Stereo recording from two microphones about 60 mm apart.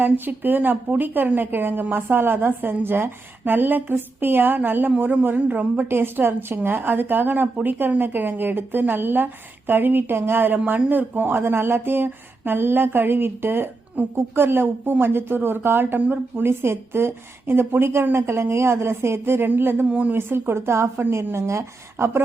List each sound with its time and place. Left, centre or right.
0.0 s a woman's voice: right
5.9 s a woman's voice: right
19.9 s speech: right
20.1 s a woman's voice: right